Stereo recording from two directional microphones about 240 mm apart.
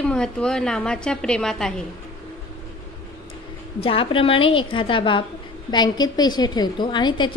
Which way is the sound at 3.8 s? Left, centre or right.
Left.